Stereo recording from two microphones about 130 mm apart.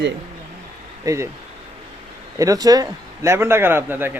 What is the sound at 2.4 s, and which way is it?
Speech, 25° right (ahead or behind).